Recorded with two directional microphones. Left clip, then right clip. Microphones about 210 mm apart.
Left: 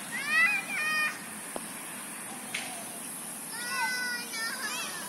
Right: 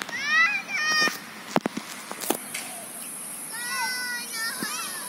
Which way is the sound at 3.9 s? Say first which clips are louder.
Right 2 dB; 25° left (ahead or behind).